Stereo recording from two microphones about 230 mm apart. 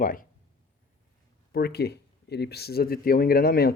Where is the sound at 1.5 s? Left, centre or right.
Left.